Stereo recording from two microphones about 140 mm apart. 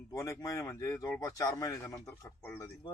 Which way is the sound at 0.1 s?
25° left (ahead or behind).